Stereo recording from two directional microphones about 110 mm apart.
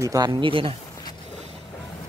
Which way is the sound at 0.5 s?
55° right (ahead or behind).